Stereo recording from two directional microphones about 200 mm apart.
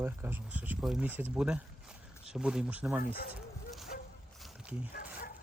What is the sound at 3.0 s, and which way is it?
Speech, 50° left (ahead or behind).